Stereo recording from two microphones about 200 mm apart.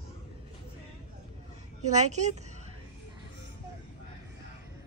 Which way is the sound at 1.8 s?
35° right (ahead or behind).